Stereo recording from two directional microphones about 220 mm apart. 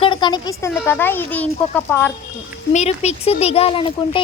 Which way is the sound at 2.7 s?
30° left (ahead or behind).